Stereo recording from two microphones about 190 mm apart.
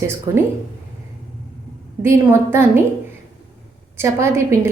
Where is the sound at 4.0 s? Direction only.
15° right (ahead or behind).